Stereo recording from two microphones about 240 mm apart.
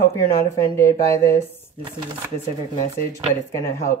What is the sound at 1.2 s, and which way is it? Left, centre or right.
Speech, centre.